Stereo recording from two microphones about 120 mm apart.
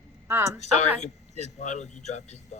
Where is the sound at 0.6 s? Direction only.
70° left (ahead or behind).